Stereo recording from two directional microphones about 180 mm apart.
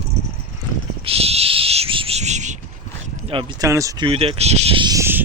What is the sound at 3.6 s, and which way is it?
Speech, 15° right (ahead or behind).